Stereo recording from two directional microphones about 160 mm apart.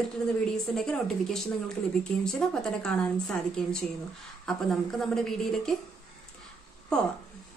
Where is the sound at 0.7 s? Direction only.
5° left (ahead or behind).